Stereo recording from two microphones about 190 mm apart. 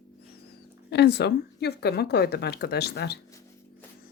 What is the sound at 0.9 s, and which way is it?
Speech, 60° left (ahead or behind).